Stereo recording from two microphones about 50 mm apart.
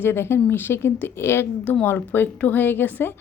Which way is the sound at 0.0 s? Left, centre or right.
Left.